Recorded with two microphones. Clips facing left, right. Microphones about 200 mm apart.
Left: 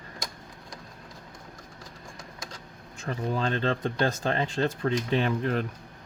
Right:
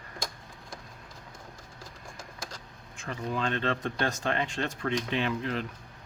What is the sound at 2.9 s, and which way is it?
Speech, 35° left (ahead or behind).